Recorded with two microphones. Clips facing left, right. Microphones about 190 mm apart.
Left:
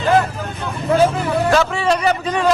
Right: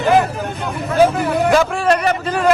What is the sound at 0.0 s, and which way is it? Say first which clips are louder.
Speech: right 2 dB; 15° right (ahead or behind).